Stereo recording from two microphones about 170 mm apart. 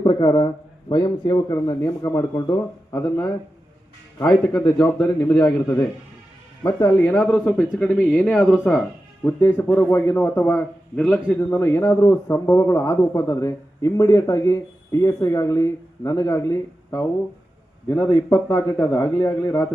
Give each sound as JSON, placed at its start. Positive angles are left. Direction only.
{"t": 0.0, "sound": "a man's voice", "side_deg": 25}
{"t": 4.3, "sound": "a man's voice", "side_deg": 5}